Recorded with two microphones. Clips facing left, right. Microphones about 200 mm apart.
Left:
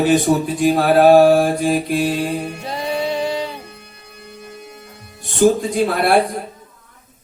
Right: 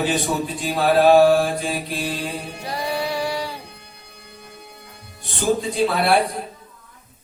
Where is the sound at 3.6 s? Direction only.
55° left (ahead or behind).